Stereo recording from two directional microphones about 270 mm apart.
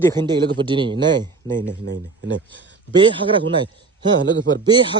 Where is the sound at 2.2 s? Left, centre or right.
Right.